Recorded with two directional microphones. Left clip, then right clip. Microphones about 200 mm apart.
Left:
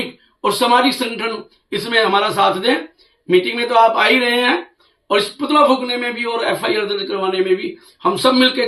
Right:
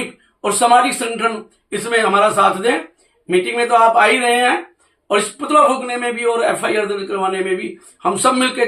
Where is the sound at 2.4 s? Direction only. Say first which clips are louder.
Right 1 dB; 20° right (ahead or behind).